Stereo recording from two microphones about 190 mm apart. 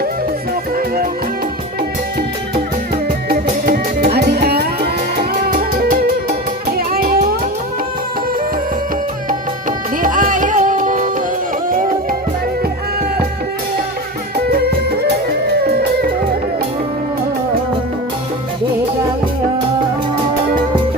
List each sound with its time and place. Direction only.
3.2 s music: 50° right (ahead or behind)
10.0 s music: 45° right (ahead or behind)
14.5 s music: 55° right (ahead or behind)